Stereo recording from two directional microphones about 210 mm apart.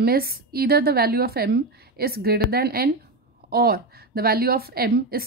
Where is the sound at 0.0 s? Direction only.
45° right (ahead or behind).